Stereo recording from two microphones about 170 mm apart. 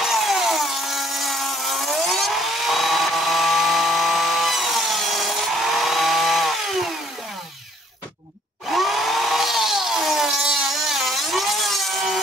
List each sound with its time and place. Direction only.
0.0 s tools: centre (ahead or behind)
8.7 s chainsaw: centre (ahead or behind)